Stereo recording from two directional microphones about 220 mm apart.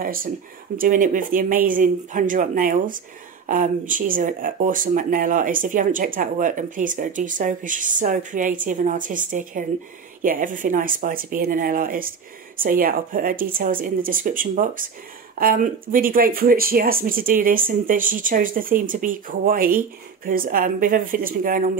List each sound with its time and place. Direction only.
0.0 s speech: 40° right (ahead or behind)